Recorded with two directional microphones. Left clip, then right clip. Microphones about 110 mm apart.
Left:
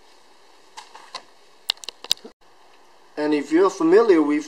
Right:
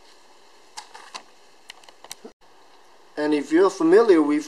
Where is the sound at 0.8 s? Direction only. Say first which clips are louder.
Right 1 dB; 30° right (ahead or behind).